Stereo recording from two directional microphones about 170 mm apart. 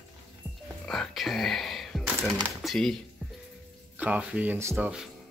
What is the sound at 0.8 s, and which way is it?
Music, centre (ahead or behind).